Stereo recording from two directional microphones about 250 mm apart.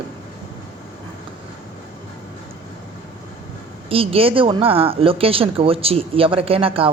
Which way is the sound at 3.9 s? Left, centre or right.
Right.